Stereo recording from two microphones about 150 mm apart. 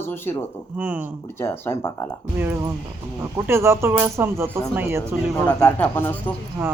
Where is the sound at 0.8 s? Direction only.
10° right (ahead or behind).